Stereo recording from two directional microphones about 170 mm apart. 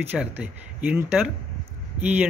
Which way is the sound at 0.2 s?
5° right (ahead or behind).